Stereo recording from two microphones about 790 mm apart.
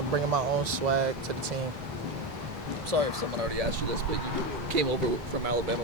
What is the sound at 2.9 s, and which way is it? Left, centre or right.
Speech, right.